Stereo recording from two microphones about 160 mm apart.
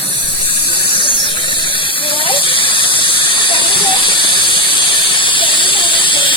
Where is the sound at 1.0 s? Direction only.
30° left (ahead or behind).